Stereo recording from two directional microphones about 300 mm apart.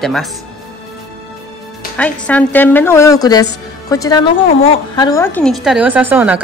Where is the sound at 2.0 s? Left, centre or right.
Centre.